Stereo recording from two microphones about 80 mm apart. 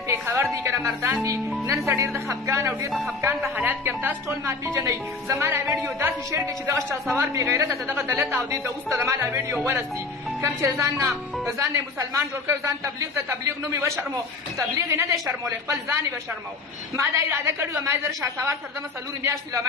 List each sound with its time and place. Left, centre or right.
0.1 s music: right
1.7 s a man's voice: right
2.9 s speech: centre
3.2 s a man's voice: right
10.4 s a man's voice: right